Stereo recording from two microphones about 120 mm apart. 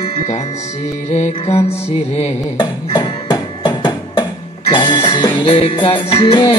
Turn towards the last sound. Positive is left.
turn(degrees=45)  # may be behind; listen again after turning